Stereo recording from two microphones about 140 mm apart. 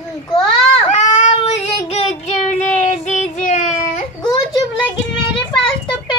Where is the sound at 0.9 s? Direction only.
60° left (ahead or behind).